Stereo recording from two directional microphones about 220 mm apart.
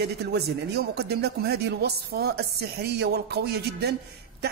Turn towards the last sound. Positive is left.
turn(degrees=-50)  # may be behind; listen again after turning